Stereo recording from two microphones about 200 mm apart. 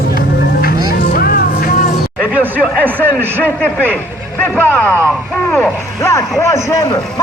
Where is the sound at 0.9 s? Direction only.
50° left (ahead or behind).